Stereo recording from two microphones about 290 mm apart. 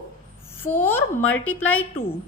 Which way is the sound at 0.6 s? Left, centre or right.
Centre.